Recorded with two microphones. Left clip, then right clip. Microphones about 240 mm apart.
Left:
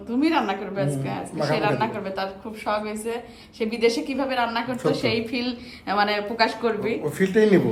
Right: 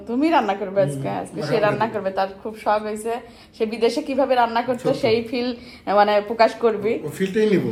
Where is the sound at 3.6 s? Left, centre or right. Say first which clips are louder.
Right 2 dB; centre.